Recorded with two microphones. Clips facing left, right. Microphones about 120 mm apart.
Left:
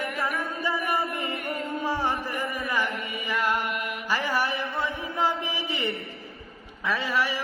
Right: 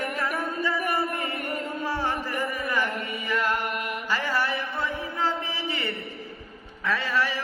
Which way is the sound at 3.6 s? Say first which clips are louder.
Even; 45° right (ahead or behind).